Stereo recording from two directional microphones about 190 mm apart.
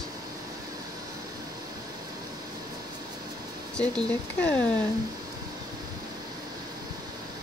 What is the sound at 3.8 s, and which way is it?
Speech, 5° left (ahead or behind).